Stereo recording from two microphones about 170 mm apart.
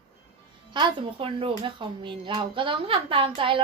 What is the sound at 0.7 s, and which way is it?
Speech, 30° right (ahead or behind).